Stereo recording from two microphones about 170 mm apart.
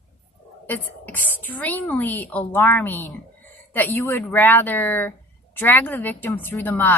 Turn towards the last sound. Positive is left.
turn(degrees=10)  # may be behind; listen again after turning